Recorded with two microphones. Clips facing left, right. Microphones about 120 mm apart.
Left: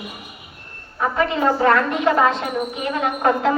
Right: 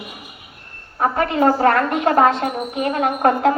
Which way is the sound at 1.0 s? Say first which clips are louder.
Right 3 dB; 50° right (ahead or behind).